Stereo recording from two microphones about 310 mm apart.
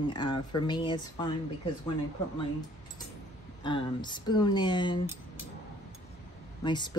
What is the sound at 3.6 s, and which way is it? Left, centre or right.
Speech, centre.